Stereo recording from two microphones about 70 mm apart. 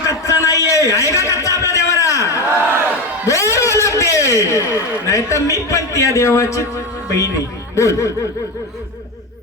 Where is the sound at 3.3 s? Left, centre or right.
Left.